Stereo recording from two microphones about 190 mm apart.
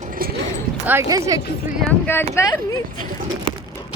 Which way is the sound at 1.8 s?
10° left (ahead or behind).